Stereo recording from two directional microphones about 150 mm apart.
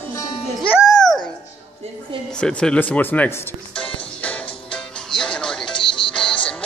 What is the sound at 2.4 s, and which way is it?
Speech, 5° left (ahead or behind).